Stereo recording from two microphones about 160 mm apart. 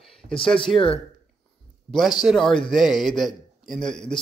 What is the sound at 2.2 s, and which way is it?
A man's voice, centre (ahead or behind).